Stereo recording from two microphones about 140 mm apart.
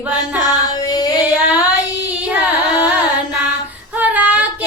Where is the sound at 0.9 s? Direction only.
30° left (ahead or behind).